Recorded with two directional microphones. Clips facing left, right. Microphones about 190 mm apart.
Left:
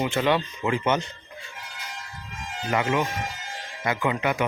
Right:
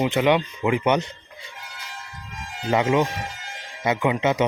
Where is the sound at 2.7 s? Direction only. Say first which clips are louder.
Right 4 dB; 25° right (ahead or behind).